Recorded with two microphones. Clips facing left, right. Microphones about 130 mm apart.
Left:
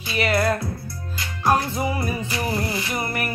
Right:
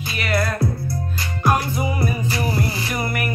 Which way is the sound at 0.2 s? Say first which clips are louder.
Left 1 dB; 30° left (ahead or behind).